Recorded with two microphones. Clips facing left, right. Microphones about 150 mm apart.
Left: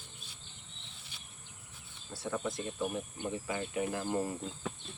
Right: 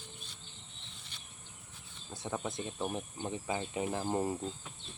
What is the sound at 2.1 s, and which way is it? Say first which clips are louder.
Speech: left 2 dB; 20° right (ahead or behind).